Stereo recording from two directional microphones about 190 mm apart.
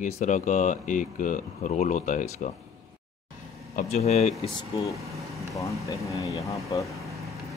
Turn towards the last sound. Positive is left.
turn(degrees=-15)  # may be behind; listen again after turning